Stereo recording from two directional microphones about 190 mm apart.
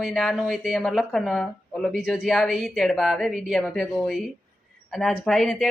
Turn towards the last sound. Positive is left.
turn(degrees=0)  # may be behind; listen again after turning